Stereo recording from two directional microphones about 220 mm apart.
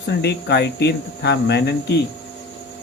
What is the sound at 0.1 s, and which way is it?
Speech, 50° left (ahead or behind).